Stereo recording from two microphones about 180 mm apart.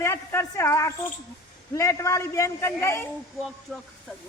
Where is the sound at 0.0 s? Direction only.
15° left (ahead or behind).